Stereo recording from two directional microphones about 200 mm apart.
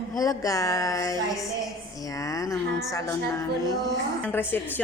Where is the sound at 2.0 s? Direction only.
15° left (ahead or behind).